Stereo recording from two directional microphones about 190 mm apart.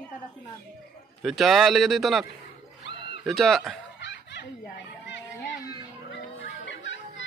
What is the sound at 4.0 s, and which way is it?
Snicker, 65° left (ahead or behind).